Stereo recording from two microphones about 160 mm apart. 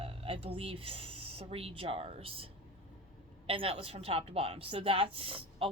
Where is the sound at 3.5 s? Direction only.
35° right (ahead or behind).